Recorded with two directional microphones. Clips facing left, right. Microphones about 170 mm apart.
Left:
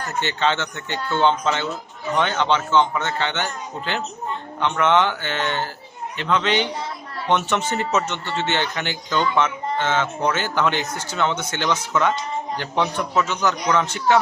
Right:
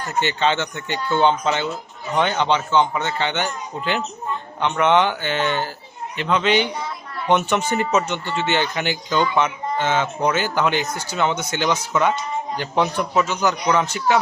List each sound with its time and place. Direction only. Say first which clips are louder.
0.2 s speech: right 2 dB; 15° right (ahead or behind)